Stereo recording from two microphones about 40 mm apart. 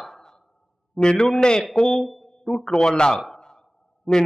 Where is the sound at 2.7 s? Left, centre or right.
Centre.